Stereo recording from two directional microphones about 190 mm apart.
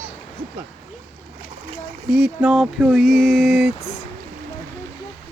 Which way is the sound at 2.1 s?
5° right (ahead or behind).